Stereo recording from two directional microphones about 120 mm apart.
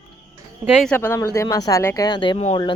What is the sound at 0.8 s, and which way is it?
Speech, 15° left (ahead or behind).